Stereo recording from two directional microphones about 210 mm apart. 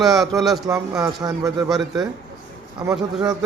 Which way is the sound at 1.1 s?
20° right (ahead or behind).